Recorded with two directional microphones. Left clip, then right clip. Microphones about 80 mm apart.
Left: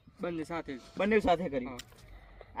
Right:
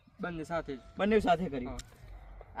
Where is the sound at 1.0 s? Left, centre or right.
Right.